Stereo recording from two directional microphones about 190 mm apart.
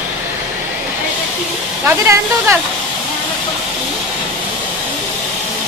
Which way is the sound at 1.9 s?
10° right (ahead or behind).